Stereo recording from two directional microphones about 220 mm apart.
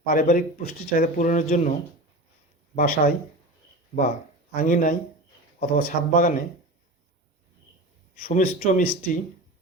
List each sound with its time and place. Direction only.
0.0 s speech: 40° left (ahead or behind)
2.7 s speech: 40° left (ahead or behind)
4.5 s speech: 35° left (ahead or behind)
8.2 s speech: 40° left (ahead or behind)